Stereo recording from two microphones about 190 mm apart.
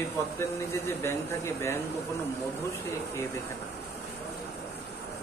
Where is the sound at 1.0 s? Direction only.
15° left (ahead or behind).